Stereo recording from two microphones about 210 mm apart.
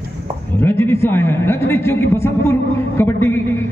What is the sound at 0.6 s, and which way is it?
A man's voice, 10° left (ahead or behind).